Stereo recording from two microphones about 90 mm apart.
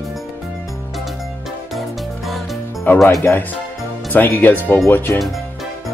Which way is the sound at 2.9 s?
20° left (ahead or behind).